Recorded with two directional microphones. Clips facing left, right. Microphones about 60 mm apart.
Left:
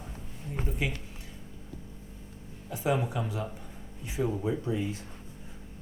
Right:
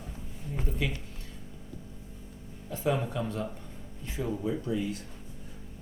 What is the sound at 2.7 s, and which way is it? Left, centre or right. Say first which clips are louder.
Speech: left 1 dB; centre.